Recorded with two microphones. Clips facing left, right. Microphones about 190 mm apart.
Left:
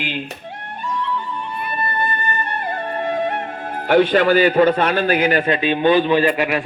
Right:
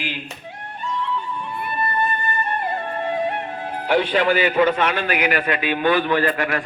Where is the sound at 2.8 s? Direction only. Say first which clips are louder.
Left 2 dB; 45° left (ahead or behind).